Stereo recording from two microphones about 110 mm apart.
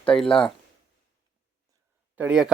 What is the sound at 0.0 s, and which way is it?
Speech, 10° left (ahead or behind).